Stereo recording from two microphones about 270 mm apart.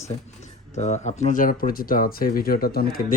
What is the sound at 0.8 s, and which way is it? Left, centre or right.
Speech, left.